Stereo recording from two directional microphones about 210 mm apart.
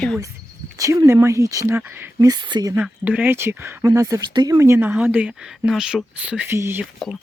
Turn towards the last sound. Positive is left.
turn(degrees=-10)  # may be behind; listen again after turning